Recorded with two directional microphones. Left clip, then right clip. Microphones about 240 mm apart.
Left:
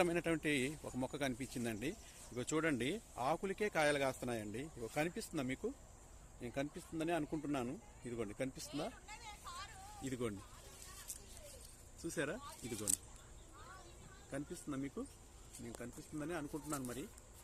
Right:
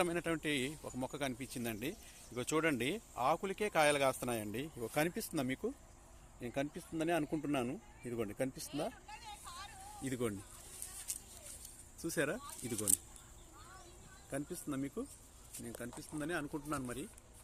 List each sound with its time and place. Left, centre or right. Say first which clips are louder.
0.0 s speech: even; centre; by 8.6 s right
8.7 s hubbub: right 4 dB; left
10.0 s speech: right 4 dB; right
12.0 s speech: right 5 dB; right
14.3 s speech: right 4 dB; right